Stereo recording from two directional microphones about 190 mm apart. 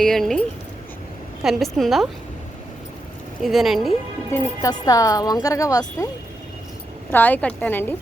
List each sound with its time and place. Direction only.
0.0 s a woman's voice: centre (ahead or behind)
3.4 s a woman's voice: centre (ahead or behind)
4.3 s a woman's voice: 15° left (ahead or behind)
7.1 s a woman's voice: 10° left (ahead or behind)